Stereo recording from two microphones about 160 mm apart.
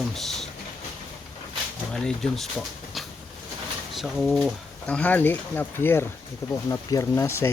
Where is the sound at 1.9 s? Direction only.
Centre (ahead or behind).